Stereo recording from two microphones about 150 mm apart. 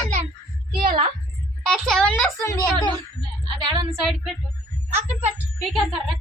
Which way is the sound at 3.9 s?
Centre (ahead or behind).